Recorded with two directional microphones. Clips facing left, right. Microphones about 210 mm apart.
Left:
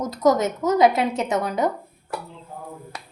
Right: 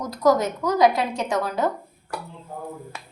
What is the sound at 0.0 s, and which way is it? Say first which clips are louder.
A woman's voice: left 1 dB; 20° left (ahead or behind).